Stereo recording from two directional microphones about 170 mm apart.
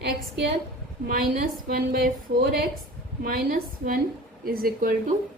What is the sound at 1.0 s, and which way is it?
A woman's voice, 55° right (ahead or behind).